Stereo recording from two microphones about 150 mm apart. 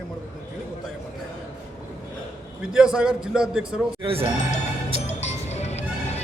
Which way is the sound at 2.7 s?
5° right (ahead or behind).